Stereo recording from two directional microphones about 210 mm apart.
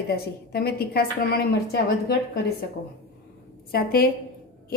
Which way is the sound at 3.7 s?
45° left (ahead or behind).